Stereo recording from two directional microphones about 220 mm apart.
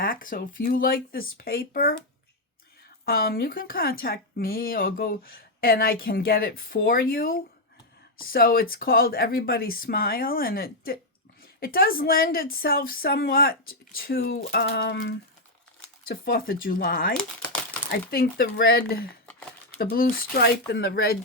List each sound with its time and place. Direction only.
0.0 s speech: 40° left (ahead or behind)
3.1 s speech: 45° left (ahead or behind)
16.0 s speech: 40° left (ahead or behind)
19.2 s a sound: 5° left (ahead or behind)
19.8 s speech: 40° left (ahead or behind)